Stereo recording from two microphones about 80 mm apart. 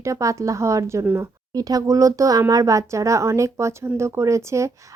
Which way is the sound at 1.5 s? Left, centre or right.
Right.